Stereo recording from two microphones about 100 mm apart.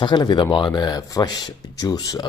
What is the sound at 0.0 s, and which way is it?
Speech, 50° left (ahead or behind).